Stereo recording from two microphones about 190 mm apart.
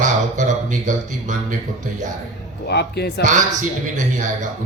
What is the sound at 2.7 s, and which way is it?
Speech, 60° left (ahead or behind).